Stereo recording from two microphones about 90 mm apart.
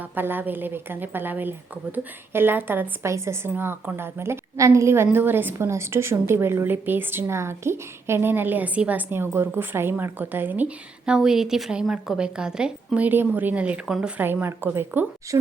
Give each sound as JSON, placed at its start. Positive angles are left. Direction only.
{"t": 0.0, "sound": "a woman's voice", "side_deg": -20}
{"t": 11.1, "sound": "a woman's voice", "side_deg": -5}
{"t": 14.2, "sound": "a woman's voice", "side_deg": -20}
{"t": 15.3, "sound": "speech", "side_deg": -35}